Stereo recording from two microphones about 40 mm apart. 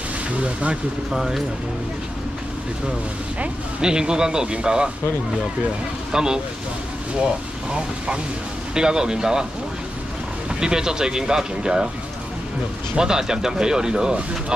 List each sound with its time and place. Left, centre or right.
0.4 s speech: right
1.1 s speech: centre
3.8 s speech: centre
6.1 s speech: centre
8.7 s speech: centre
10.6 s speech: centre
12.9 s speech: centre